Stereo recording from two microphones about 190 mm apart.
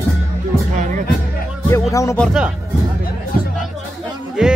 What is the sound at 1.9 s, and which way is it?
Speech, 15° left (ahead or behind).